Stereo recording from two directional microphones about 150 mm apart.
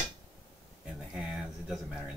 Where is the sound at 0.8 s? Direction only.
5° right (ahead or behind).